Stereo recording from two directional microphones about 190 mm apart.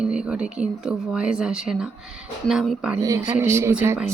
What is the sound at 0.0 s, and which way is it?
Speech, 5° right (ahead or behind).